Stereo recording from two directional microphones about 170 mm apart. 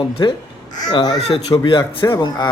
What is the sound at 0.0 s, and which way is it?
A man's voice, 30° left (ahead or behind).